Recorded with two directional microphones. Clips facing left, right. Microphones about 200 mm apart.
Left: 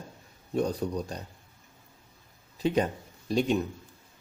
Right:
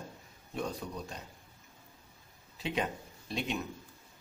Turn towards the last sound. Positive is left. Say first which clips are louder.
# left 10 dB
turn(degrees=40)  # may be behind; listen again after turning